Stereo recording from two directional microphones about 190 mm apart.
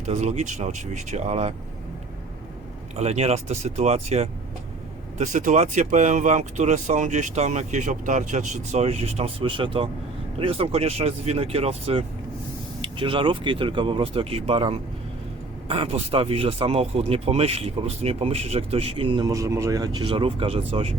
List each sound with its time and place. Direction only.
0.0 s speech: 35° right (ahead or behind)
2.9 s speech: 35° right (ahead or behind)